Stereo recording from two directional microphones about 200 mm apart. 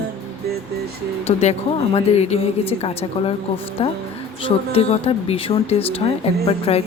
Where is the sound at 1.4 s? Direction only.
35° left (ahead or behind).